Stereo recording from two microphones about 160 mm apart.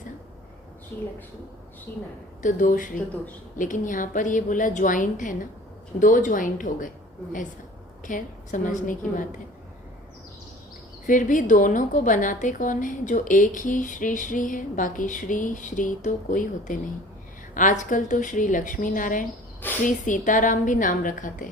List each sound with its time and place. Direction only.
2.4 s a woman's voice: 55° left (ahead or behind)
8.0 s a woman's voice: 55° left (ahead or behind)
11.0 s a woman's voice: 55° left (ahead or behind)